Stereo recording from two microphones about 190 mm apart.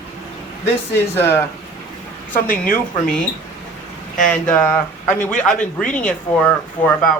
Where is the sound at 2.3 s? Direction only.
45° left (ahead or behind).